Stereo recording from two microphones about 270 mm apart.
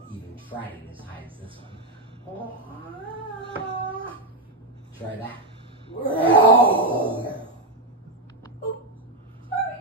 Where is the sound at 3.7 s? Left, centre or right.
Centre.